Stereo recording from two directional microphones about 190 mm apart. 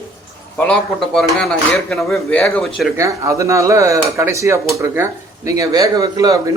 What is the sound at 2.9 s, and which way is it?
Speech, 15° right (ahead or behind).